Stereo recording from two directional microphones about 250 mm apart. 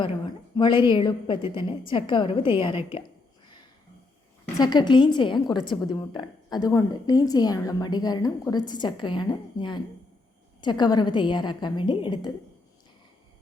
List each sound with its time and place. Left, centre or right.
0.0 s a woman's voice: centre
4.5 s a woman's voice: centre